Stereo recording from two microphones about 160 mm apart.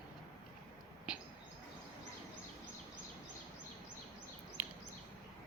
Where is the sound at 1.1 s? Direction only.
5° right (ahead or behind).